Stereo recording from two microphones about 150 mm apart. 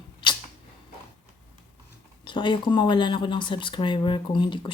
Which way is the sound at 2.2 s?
35° left (ahead or behind).